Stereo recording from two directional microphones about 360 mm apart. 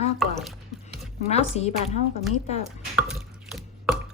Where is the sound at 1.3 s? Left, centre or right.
Centre.